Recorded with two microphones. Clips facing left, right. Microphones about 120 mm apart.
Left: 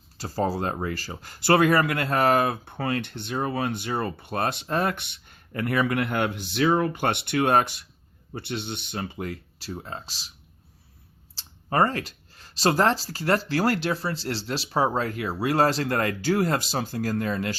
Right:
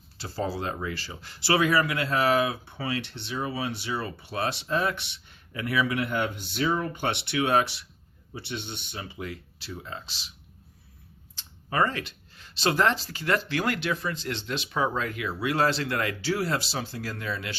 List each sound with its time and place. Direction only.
0.2 s speech: 40° left (ahead or behind); by 6.9 s 85° left
7.0 s speech: 50° left (ahead or behind)
11.3 s speech: 40° left (ahead or behind)